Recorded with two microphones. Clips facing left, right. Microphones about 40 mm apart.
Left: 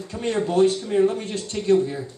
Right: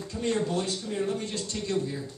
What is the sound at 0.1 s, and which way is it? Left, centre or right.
Speech, left.